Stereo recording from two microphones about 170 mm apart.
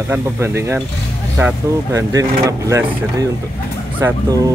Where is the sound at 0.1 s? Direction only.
15° right (ahead or behind).